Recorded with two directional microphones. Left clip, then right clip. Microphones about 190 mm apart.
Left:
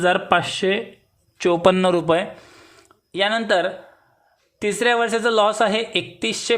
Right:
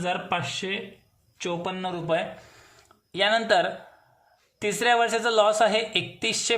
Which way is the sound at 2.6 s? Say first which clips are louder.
Left 5 dB; 25° left (ahead or behind).